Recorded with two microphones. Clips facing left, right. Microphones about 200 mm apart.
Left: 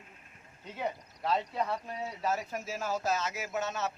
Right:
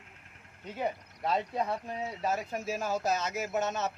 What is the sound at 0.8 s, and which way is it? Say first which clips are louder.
Speech: right 2 dB; 15° right (ahead or behind).